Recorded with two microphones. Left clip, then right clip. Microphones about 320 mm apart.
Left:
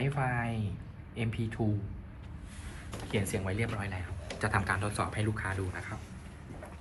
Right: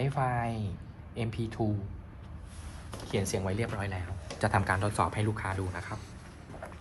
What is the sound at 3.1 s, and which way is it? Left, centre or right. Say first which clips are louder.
A man's voice: right 2 dB; right.